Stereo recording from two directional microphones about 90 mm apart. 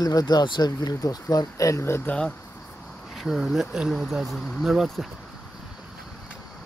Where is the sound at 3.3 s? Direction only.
5° right (ahead or behind).